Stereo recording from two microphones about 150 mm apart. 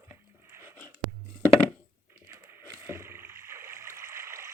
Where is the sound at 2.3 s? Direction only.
15° right (ahead or behind).